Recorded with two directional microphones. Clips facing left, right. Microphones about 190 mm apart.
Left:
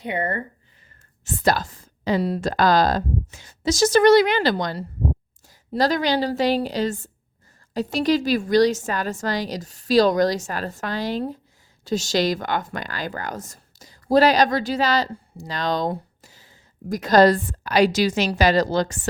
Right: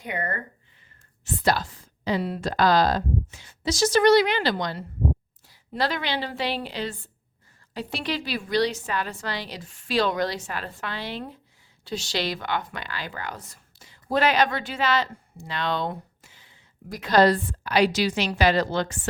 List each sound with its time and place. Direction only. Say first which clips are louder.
0.0 s speech: left 5 dB; 25° left (ahead or behind)
1.2 s a woman's voice: left 3 dB; 45° left (ahead or behind)